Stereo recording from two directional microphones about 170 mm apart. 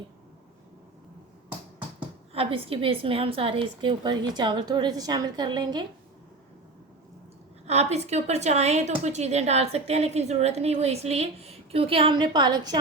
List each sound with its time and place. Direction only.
2.0 s a woman's voice: 35° right (ahead or behind)
7.7 s a woman's voice: 40° right (ahead or behind); by 12.8 s 25° right (ahead or behind)